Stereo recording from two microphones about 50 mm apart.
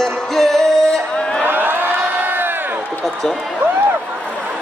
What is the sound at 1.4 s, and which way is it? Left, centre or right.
Crowd, right.